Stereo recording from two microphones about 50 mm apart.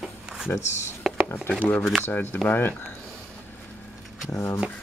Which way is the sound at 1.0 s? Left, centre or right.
Centre.